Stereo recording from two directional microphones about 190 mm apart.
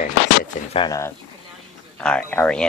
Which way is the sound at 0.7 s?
25° left (ahead or behind).